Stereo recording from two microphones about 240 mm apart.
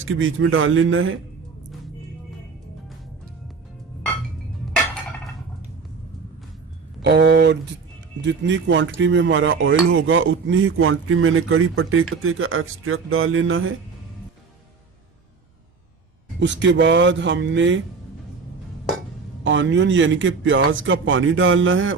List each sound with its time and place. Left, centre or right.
0.0 s speech: right
7.0 s speech: right
16.4 s speech: right
19.5 s speech: right